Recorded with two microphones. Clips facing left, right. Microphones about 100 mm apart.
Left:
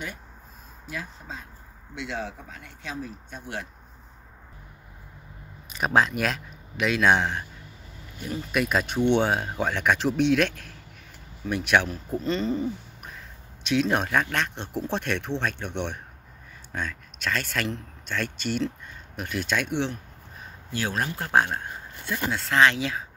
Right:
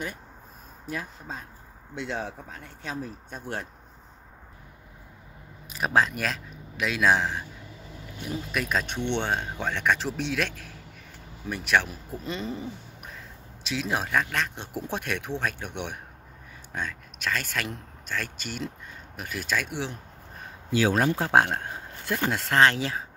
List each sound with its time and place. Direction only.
0.8 s speech: 40° right (ahead or behind)
5.7 s speech: centre (ahead or behind)
8.5 s speech: 5° left (ahead or behind)
21.2 s speech: 70° right (ahead or behind); by 22.6 s 55° right (ahead or behind)
22.6 s speech: 35° right (ahead or behind)